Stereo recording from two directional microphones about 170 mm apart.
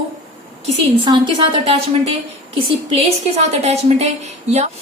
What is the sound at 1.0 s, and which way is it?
A woman's voice, 25° right (ahead or behind).